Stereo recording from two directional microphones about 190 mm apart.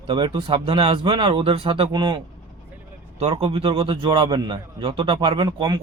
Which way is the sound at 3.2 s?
30° right (ahead or behind).